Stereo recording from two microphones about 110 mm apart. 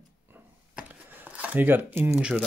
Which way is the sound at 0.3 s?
15° right (ahead or behind).